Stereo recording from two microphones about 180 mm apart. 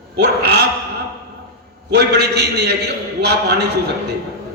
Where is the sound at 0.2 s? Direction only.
65° right (ahead or behind).